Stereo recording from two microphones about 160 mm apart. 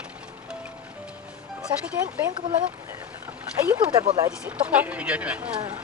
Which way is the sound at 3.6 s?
25° right (ahead or behind).